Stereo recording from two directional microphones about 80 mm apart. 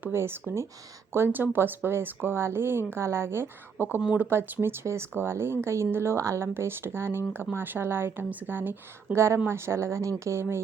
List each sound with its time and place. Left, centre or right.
0.0 s speech: right